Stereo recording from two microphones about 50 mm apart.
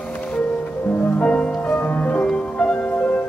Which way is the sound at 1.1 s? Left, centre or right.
Left.